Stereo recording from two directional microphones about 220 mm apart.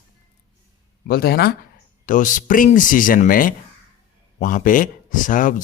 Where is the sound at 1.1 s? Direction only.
45° left (ahead or behind).